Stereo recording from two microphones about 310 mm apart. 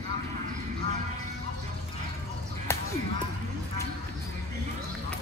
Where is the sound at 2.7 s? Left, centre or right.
Centre.